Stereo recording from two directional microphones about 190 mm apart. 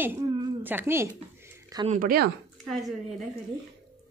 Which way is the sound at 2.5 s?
Centre (ahead or behind).